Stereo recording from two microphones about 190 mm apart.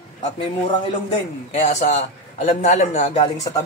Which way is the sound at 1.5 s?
35° left (ahead or behind).